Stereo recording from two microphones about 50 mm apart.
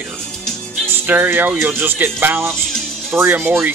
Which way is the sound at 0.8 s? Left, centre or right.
Right.